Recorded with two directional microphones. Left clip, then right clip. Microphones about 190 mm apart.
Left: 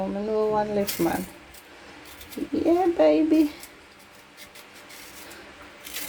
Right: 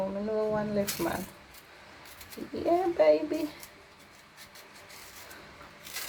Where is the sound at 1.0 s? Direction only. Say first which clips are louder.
Left 7 dB; 20° left (ahead or behind).